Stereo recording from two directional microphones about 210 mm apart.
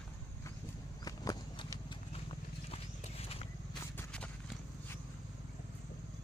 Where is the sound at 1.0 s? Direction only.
20° left (ahead or behind).